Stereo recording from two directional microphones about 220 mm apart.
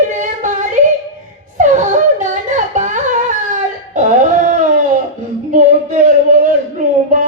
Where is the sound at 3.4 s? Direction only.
35° right (ahead or behind).